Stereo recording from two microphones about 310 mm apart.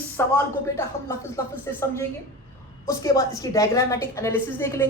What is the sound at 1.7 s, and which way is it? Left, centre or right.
Speech, centre.